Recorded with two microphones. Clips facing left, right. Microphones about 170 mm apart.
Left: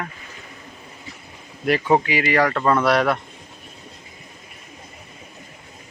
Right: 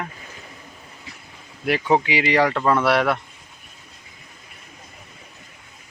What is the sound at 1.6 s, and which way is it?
Speech, 10° right (ahead or behind).